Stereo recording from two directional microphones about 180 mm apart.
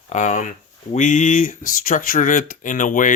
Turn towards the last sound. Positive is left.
turn(degrees=45)  # may be behind; listen again after turning